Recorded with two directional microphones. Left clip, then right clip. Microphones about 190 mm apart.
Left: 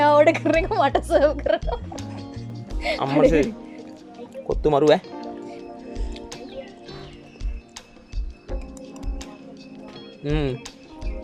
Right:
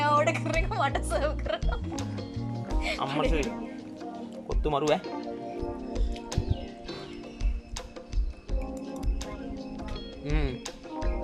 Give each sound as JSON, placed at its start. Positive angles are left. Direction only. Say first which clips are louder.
{"t": 0.0, "sound": "music", "louder": "left 9 dB", "side_deg": 30}
{"t": 0.6, "sound": "a woman's voice", "louder": "left 9 dB", "side_deg": 30}
{"t": 2.8, "sound": "a woman's voice", "louder": "left 11 dB", "side_deg": 25}
{"t": 4.6, "sound": "speech", "louder": "left 9 dB", "side_deg": 20}
{"t": 5.0, "sound": "music", "louder": "left 1 dB", "side_deg": 0}
{"t": 8.4, "sound": "music", "louder": "even", "side_deg": 0}
{"t": 10.2, "sound": "speech", "louder": "left 9 dB", "side_deg": 15}